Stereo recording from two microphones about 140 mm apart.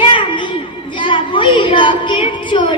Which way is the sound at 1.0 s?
35° left (ahead or behind).